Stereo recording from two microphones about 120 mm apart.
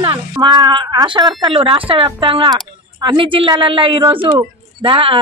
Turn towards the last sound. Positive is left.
turn(degrees=-45)  # may be behind; listen again after turning